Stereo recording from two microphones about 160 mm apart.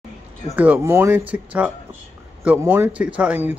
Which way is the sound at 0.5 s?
15° right (ahead or behind).